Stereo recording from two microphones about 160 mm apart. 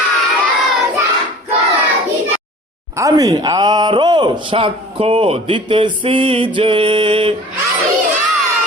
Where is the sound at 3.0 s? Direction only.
20° right (ahead or behind).